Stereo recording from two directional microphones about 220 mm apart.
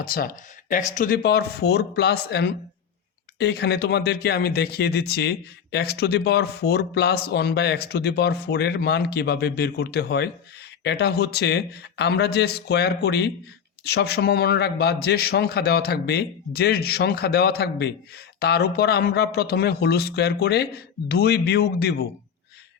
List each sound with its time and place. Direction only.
0.0 s speech: 40° left (ahead or behind)